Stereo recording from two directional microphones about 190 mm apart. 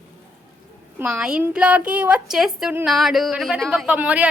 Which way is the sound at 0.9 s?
10° right (ahead or behind).